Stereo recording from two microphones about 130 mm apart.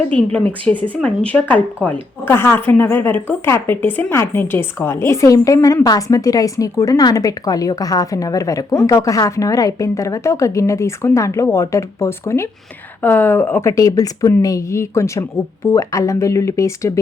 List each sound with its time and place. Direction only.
0.3 s speech: 10° left (ahead or behind)